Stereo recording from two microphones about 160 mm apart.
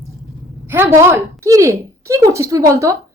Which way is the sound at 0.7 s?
15° right (ahead or behind).